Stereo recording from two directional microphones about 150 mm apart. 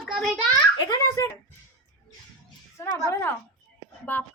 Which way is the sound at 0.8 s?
25° left (ahead or behind).